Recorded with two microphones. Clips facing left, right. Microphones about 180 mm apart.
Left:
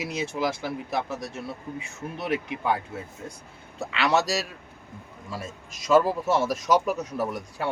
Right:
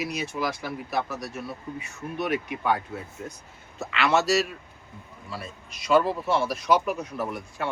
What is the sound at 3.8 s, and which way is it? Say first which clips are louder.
Speech: even; 35° left (ahead or behind).